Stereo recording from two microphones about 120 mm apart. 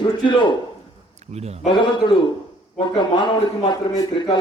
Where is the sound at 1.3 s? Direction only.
65° right (ahead or behind).